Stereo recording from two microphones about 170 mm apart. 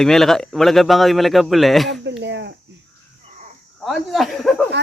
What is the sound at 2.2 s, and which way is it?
Cricket, 90° right.